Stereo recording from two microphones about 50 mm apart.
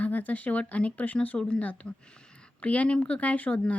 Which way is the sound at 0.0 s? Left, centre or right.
Left.